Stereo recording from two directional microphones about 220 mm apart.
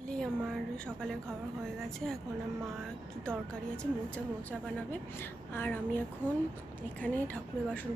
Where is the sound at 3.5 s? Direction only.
5° left (ahead or behind).